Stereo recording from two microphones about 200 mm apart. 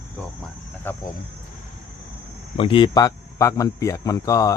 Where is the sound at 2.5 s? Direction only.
25° left (ahead or behind).